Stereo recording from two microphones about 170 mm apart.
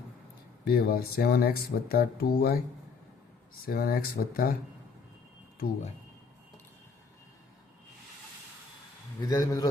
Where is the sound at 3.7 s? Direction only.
60° left (ahead or behind).